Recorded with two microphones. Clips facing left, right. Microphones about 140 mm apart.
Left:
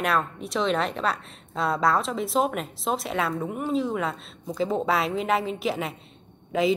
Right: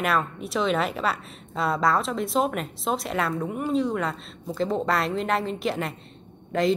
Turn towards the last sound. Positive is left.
turn(degrees=5)  # may be behind; listen again after turning